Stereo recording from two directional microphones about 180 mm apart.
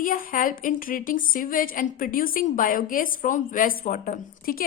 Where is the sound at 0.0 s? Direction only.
50° left (ahead or behind).